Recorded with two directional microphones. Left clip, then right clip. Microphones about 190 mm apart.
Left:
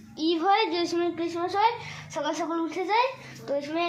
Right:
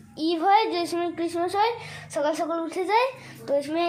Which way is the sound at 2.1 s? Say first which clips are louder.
Right 4 dB; 30° right (ahead or behind).